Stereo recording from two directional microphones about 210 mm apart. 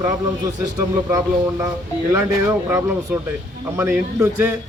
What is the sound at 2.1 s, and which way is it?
Speech, 10° right (ahead or behind).